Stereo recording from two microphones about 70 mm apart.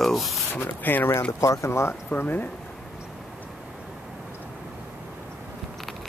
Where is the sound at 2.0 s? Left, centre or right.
Left.